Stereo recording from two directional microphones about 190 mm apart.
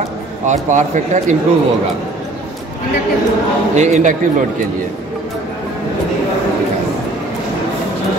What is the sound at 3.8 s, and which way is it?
Speech, 40° right (ahead or behind).